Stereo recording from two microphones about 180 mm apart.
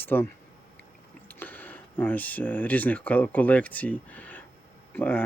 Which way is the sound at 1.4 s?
10° left (ahead or behind).